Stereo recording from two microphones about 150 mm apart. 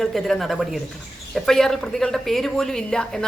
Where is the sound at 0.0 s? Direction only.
Centre (ahead or behind).